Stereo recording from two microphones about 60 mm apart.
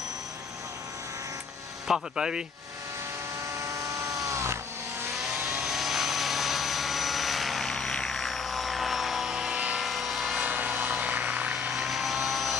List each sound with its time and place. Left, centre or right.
1.9 s speech: centre
3.6 s vehicle: right
5.4 s vehicle: centre
9.8 s helicopter: centre
10.4 s vehicle: right
11.7 s vehicle: centre